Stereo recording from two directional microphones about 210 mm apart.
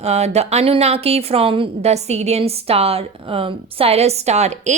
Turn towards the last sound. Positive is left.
turn(degrees=-30)  # may be behind; listen again after turning